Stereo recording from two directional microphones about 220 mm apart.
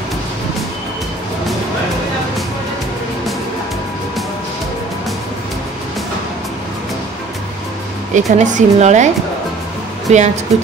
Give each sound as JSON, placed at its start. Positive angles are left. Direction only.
{"t": 8.1, "sound": "speech", "side_deg": -35}